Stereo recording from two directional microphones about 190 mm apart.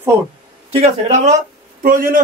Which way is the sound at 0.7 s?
35° right (ahead or behind).